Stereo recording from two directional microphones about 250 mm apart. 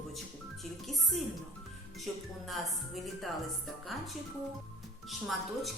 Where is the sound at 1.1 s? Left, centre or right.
Centre.